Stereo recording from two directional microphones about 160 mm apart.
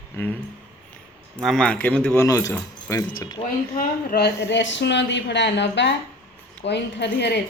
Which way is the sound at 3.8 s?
80° left.